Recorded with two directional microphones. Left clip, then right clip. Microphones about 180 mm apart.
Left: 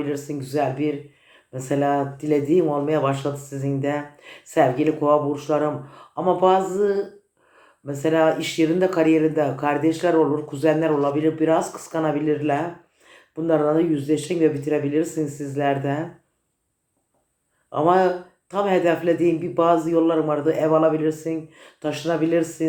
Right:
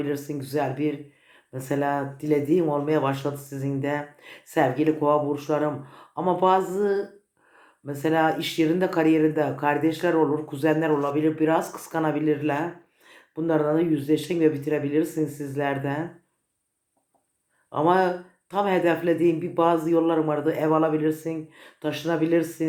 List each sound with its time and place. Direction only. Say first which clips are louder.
0.0 s speech: left 2 dB; 40° right (ahead or behind)
17.7 s speech: left 3 dB; 40° right (ahead or behind)